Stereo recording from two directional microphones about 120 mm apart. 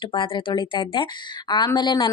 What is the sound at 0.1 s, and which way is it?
A woman's voice, 45° left (ahead or behind).